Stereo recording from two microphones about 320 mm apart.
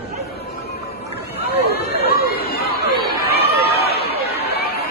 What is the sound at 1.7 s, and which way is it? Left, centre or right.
Chatter, left.